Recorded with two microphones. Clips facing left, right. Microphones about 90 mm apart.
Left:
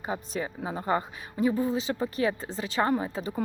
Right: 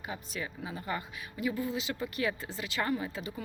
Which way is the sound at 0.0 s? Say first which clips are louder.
Left 7 dB; 35° left (ahead or behind).